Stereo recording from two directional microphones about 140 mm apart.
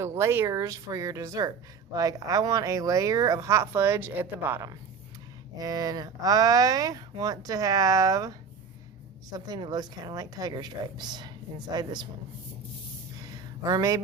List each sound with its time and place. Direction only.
0.0 s speech: 20° right (ahead or behind)
5.5 s a woman's voice: 25° right (ahead or behind)
13.3 s a sound: 25° right (ahead or behind)